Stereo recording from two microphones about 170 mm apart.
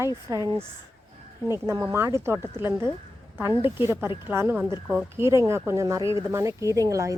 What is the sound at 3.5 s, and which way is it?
Speech, 30° left (ahead or behind).